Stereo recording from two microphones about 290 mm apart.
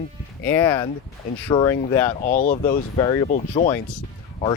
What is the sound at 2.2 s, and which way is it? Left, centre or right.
Speech, left.